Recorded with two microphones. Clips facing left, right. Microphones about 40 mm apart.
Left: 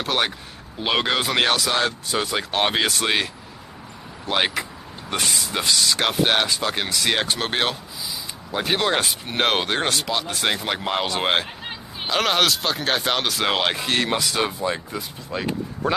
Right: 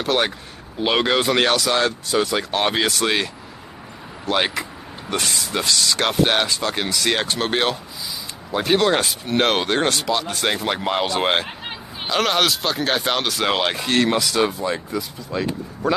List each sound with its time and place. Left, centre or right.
0.0 s speech: centre
2.5 s speech: centre
2.8 s speech: centre
4.3 s speech: centre
15.0 s speech: left